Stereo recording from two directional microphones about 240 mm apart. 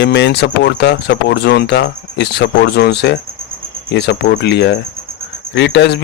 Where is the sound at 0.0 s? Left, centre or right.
Left.